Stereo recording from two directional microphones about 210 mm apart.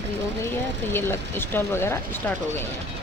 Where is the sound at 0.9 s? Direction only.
10° left (ahead or behind).